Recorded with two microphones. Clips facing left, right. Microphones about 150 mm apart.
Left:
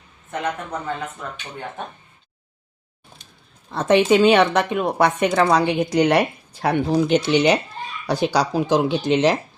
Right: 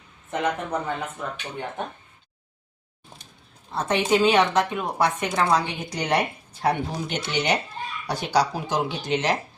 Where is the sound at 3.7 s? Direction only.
90° left.